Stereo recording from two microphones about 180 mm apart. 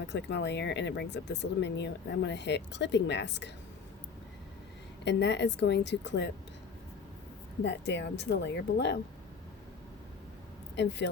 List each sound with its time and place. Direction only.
0.1 s speech: 75° left (ahead or behind)
5.0 s speech: 75° left (ahead or behind)
7.6 s speech: 75° left (ahead or behind)
10.8 s speech: 75° left (ahead or behind)